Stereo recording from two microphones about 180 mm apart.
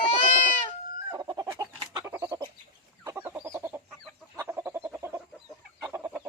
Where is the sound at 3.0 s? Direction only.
10° right (ahead or behind).